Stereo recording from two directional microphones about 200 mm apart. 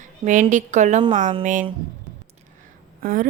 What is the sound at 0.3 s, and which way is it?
Speech, 40° right (ahead or behind).